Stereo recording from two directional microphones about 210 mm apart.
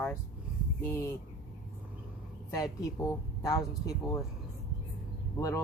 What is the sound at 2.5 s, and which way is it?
Speech, 15° left (ahead or behind).